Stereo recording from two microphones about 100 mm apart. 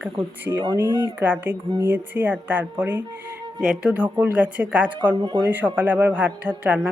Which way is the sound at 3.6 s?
5° right (ahead or behind).